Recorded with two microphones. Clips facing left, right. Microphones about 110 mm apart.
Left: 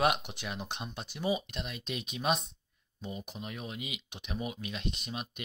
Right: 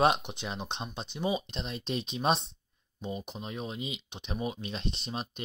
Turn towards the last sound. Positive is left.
turn(degrees=-30)  # may be behind; listen again after turning